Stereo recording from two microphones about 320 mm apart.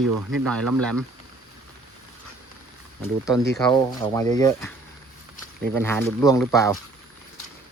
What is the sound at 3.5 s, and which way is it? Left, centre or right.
Speech, centre.